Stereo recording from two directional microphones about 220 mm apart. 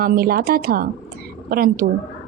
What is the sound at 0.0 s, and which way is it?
A woman's voice, 45° right (ahead or behind).